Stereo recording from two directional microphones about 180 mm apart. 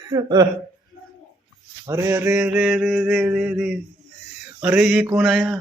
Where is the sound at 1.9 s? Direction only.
15° right (ahead or behind).